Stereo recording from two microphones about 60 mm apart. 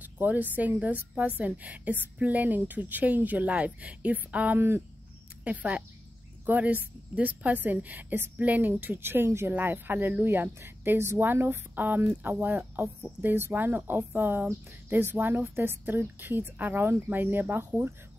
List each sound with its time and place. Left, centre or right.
0.0 s speech: right
4.6 s speech: right
5.4 s speech: right
9.5 s speech: right